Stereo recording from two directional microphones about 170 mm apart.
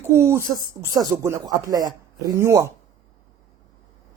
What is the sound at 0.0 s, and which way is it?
Speech, 15° right (ahead or behind).